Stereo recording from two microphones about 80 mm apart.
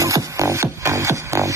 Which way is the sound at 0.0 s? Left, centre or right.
Right.